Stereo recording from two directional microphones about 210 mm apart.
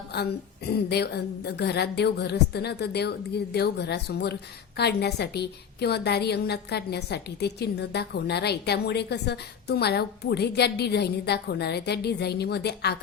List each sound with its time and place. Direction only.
0.1 s a woman's voice: 50° left (ahead or behind)